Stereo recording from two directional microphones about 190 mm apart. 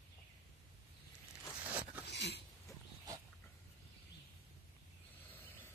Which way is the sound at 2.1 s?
60° left (ahead or behind).